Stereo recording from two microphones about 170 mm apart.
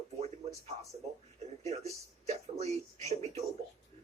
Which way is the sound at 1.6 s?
40° right (ahead or behind).